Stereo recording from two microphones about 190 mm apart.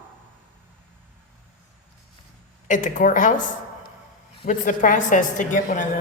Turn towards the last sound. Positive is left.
turn(degrees=40)  # may be behind; listen again after turning